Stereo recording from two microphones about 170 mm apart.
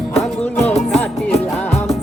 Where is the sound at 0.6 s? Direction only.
40° left (ahead or behind).